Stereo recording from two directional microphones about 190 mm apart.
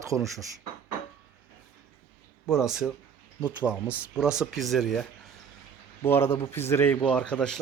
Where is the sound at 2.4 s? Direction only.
Centre (ahead or behind).